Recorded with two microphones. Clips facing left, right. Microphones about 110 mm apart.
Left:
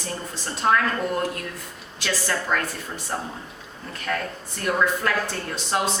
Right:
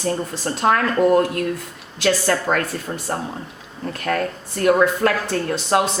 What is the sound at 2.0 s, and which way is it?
A woman's voice, 40° right (ahead or behind).